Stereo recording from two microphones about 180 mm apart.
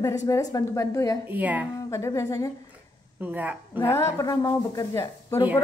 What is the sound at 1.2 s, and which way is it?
Speech, 10° right (ahead or behind).